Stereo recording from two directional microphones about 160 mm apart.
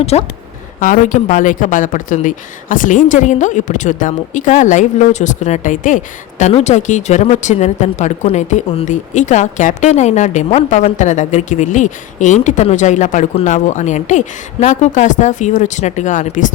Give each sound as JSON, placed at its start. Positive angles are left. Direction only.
{"t": 0.0, "sound": "speech", "side_deg": 40}
{"t": 0.8, "sound": "speech", "side_deg": 55}
{"t": 6.4, "sound": "speech", "side_deg": 45}